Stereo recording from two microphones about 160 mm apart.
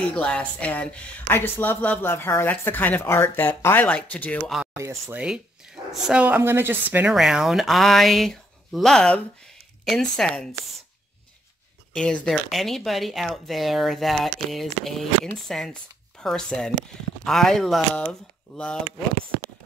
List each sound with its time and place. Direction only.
0.1 s speech: 10° left (ahead or behind)
4.7 s speech: 15° right (ahead or behind)
5.9 s a woman's voice: 5° right (ahead or behind)
11.9 s a woman's voice: 5° left (ahead or behind)